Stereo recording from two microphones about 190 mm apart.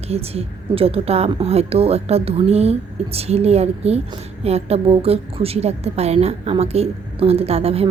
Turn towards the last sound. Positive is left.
turn(degrees=-30)  # may be behind; listen again after turning